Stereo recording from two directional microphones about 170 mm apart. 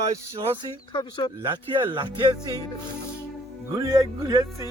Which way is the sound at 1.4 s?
30° right (ahead or behind).